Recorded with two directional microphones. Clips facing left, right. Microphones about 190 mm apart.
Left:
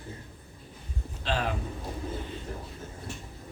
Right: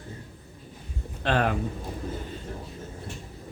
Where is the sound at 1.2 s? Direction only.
60° right (ahead or behind).